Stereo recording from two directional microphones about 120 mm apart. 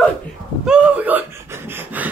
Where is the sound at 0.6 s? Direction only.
10° right (ahead or behind).